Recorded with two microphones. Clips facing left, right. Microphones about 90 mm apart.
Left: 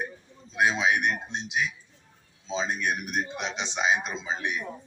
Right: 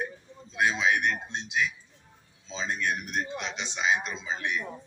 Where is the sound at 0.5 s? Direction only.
20° left (ahead or behind).